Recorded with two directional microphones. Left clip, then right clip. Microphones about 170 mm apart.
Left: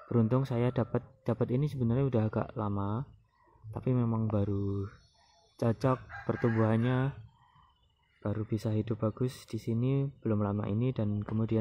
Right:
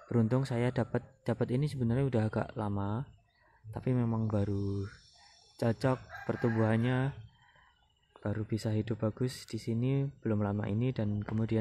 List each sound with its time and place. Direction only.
0.1 s speech: 5° left (ahead or behind)
8.2 s speech: centre (ahead or behind)
9.4 s speech: 35° right (ahead or behind)
9.7 s speech: 5° left (ahead or behind)